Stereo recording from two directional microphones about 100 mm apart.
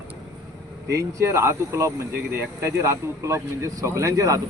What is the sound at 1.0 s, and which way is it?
Speech, 30° right (ahead or behind).